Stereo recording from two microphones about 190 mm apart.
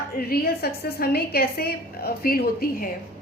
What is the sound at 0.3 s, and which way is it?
A woman's voice, 55° left (ahead or behind).